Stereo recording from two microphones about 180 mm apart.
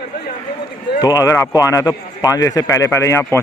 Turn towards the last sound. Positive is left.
turn(degrees=15)  # may be behind; listen again after turning